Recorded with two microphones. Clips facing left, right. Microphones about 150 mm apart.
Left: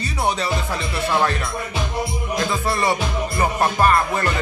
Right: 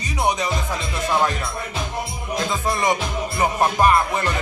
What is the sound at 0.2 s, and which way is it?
Music, 15° right (ahead or behind).